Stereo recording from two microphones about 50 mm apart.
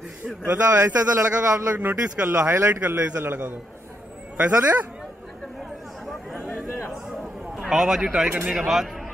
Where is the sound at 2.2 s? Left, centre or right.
Right.